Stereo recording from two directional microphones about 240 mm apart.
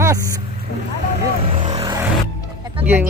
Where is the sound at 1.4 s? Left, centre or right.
Right.